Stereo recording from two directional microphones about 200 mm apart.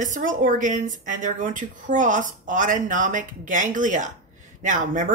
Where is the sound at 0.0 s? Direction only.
40° right (ahead or behind).